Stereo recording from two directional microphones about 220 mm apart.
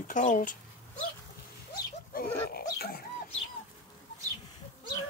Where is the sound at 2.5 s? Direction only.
45° left (ahead or behind).